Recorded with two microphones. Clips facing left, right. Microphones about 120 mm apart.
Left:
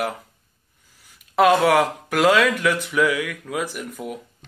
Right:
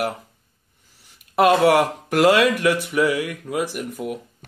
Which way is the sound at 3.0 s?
40° right (ahead or behind).